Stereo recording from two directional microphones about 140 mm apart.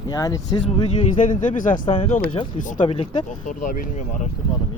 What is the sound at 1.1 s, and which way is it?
Speech, 65° left (ahead or behind).